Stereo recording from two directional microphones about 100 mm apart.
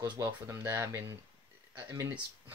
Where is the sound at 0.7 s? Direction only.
25° right (ahead or behind).